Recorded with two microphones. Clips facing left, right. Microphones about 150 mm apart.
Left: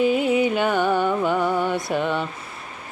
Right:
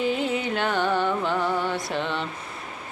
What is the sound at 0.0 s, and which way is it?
Music, 15° left (ahead or behind).